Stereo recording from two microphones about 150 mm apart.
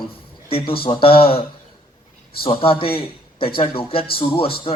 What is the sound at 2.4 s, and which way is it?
Speech, 40° left (ahead or behind).